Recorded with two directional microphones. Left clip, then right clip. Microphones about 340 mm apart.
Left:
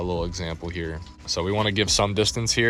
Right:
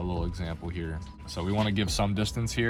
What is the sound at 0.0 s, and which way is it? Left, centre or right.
Speech, left.